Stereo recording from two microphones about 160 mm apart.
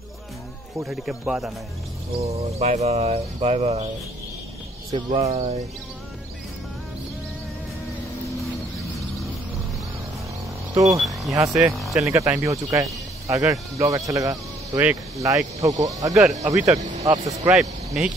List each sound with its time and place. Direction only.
0.8 s speech: centre (ahead or behind)
2.1 s bird: 40° right (ahead or behind)
4.9 s bird: 35° right (ahead or behind)
10.7 s speech: 20° right (ahead or behind)
11.0 s speech: centre (ahead or behind)
11.3 s speech: 20° right (ahead or behind)
11.6 s speech: centre (ahead or behind)
12.1 s speech: 20° right (ahead or behind)
17.5 s speech: 5° right (ahead or behind)